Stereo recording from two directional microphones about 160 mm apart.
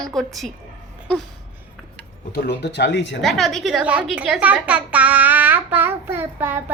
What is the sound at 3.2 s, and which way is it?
A woman's voice, centre (ahead or behind).